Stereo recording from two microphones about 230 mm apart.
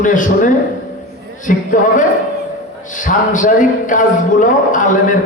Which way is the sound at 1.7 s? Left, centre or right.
Left.